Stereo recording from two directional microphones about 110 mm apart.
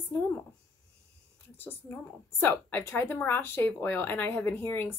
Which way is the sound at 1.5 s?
20° left (ahead or behind).